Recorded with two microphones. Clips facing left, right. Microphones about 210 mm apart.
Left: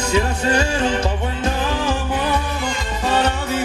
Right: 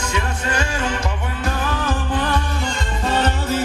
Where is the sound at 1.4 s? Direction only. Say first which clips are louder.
Left 1 dB; 15° left (ahead or behind).